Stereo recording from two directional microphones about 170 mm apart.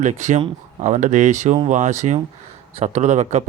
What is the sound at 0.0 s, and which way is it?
Speech, 45° right (ahead or behind).